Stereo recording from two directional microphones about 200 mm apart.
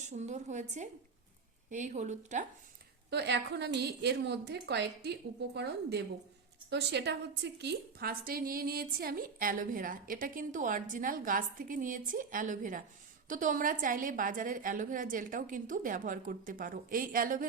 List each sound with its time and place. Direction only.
0.1 s speech: 35° right (ahead or behind)
3.1 s a woman's voice: 55° right (ahead or behind)